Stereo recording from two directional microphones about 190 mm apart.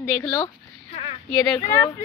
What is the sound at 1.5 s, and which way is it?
Speech, 20° left (ahead or behind).